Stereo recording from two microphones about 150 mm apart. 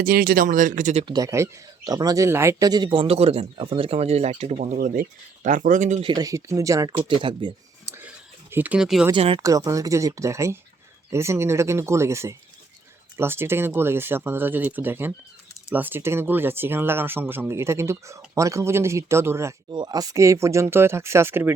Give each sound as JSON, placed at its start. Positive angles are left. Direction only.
{"t": 0.0, "sound": "speech", "side_deg": -80}
{"t": 1.0, "sound": "speech", "side_deg": -25}
{"t": 6.0, "sound": "speech", "side_deg": -30}
{"t": 7.0, "sound": "speech", "side_deg": -35}
{"t": 7.9, "sound": "a sound", "side_deg": -15}
{"t": 9.1, "sound": "speech", "side_deg": -35}
{"t": 9.4, "sound": "speech", "side_deg": -20}
{"t": 19.7, "sound": "speech", "side_deg": -25}